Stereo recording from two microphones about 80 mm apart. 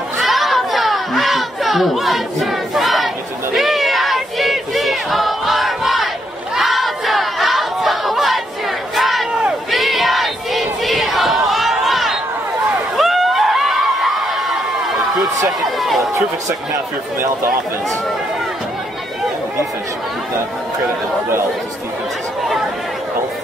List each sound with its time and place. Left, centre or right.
0.2 s a sound: centre
6.5 s battle cry: centre
8.9 s crowd: centre
9.4 s battle cry: centre
12.9 s a sound: centre
16.0 s speech: right